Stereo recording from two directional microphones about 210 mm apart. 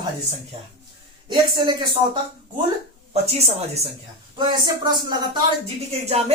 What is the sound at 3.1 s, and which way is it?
A woman's voice, 30° right (ahead or behind).